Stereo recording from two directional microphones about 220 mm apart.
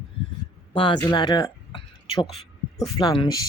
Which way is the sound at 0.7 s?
25° left (ahead or behind).